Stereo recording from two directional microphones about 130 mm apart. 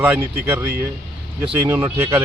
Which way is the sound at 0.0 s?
15° right (ahead or behind).